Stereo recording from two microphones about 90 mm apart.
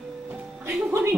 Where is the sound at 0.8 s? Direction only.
30° right (ahead or behind).